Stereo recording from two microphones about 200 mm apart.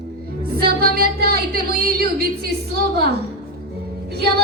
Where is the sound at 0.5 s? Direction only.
50° right (ahead or behind).